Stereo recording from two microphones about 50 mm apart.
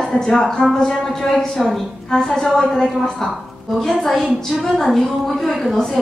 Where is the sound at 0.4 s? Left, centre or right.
Centre.